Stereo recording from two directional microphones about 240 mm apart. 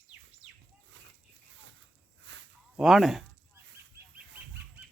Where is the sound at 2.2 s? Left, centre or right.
Right.